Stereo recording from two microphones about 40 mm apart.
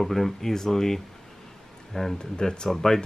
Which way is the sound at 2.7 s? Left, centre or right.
Centre.